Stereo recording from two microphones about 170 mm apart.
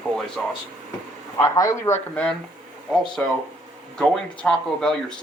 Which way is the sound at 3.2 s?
10° left (ahead or behind).